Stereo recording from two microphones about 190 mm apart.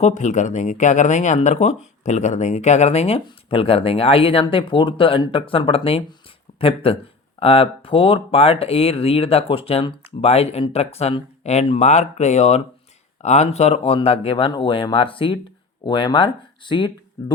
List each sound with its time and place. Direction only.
0.0 s speech: 40° left (ahead or behind)